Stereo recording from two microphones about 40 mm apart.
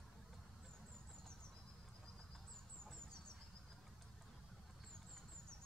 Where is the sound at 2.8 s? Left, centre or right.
Centre.